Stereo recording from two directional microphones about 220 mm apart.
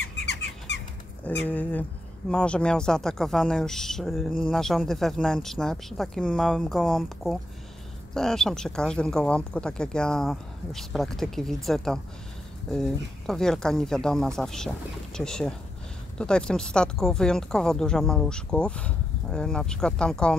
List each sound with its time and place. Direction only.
0.0 s squeak: 50° left (ahead or behind)
1.5 s speech: 5° left (ahead or behind)